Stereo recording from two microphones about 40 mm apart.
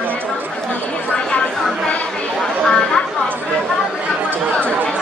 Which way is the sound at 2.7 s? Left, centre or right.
Centre.